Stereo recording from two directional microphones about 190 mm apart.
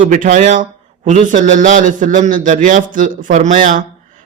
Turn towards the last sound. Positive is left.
turn(degrees=-45)  # may be behind; listen again after turning